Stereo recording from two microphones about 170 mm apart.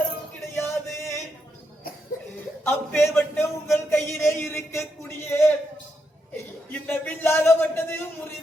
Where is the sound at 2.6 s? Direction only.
15° left (ahead or behind).